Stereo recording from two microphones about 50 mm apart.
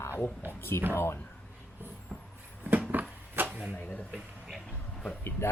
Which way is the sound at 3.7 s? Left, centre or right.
Left.